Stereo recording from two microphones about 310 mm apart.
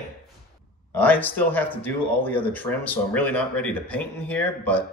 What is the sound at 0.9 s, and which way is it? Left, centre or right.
Speech, centre.